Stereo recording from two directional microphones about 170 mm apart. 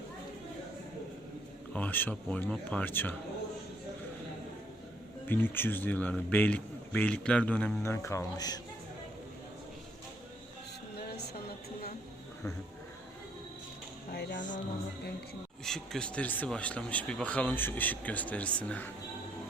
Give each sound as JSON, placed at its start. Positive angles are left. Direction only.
{"t": 1.7, "sound": "a man's voice", "side_deg": 10}
{"t": 5.2, "sound": "a man's voice", "side_deg": 10}
{"t": 14.1, "sound": "music", "side_deg": 65}
{"t": 15.6, "sound": "a man's voice", "side_deg": 5}